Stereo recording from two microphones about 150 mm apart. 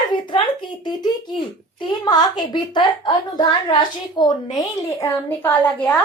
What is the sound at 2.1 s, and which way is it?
A woman's voice, 30° left (ahead or behind).